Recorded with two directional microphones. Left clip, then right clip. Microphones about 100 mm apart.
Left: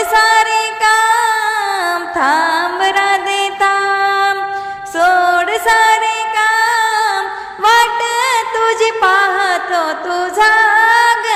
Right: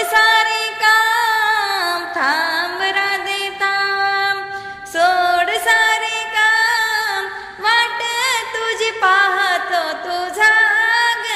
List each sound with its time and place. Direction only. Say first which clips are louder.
0.1 s music: left 3 dB; 35° left (ahead or behind)
1.3 s music: left 1 dB; 25° left (ahead or behind); by 8.9 s 60° left (ahead or behind)
9.0 s music: right 1 dB; 45° left (ahead or behind); by 11.2 s 65° left (ahead or behind)